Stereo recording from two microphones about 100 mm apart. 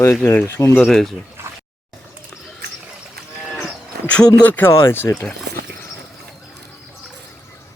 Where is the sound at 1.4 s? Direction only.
25° right (ahead or behind).